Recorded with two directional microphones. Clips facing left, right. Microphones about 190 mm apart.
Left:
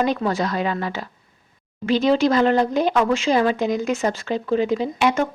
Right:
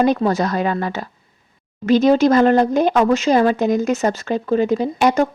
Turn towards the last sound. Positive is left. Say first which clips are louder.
# right 4 dB
turn(degrees=-40)  # may be behind; listen again after turning